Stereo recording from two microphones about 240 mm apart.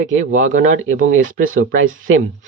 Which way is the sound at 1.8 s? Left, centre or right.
Right.